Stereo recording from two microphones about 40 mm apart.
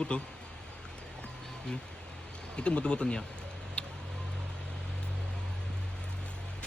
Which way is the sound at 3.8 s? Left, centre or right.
Left.